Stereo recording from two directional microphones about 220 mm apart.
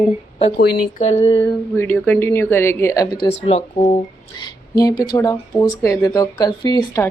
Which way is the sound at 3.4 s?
25° left (ahead or behind).